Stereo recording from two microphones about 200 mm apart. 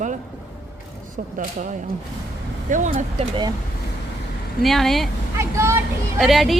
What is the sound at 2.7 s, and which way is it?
Speech, 40° right (ahead or behind).